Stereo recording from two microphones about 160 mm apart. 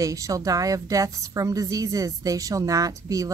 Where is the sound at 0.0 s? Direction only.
20° right (ahead or behind).